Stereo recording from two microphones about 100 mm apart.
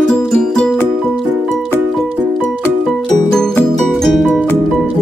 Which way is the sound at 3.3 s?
5° left (ahead or behind).